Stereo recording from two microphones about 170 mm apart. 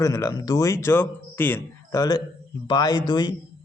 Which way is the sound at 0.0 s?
20° left (ahead or behind).